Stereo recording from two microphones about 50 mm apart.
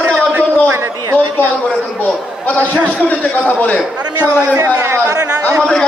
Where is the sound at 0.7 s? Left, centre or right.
Right.